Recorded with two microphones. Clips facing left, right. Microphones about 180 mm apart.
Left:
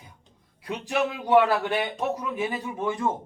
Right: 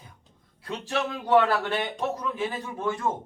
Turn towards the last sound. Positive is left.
turn(degrees=15)  # may be behind; listen again after turning